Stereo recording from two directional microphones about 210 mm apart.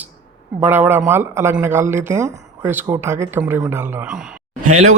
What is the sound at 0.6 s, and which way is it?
Speech, 10° right (ahead or behind).